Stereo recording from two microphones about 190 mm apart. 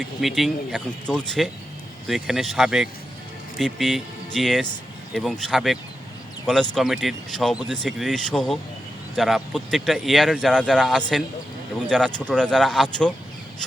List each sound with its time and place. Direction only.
0.2 s speech: centre (ahead or behind)